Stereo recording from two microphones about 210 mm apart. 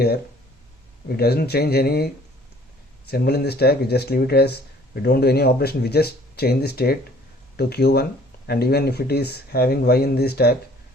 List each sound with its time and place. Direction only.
1.0 s speech: 50° left (ahead or behind)
3.1 s speech: 50° left (ahead or behind)